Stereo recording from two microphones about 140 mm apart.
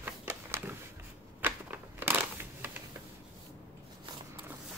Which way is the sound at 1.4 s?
15° right (ahead or behind).